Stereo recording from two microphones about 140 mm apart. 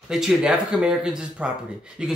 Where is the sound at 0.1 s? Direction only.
5° right (ahead or behind).